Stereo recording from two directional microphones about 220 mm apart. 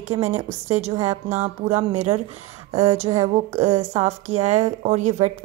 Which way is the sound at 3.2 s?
30° right (ahead or behind).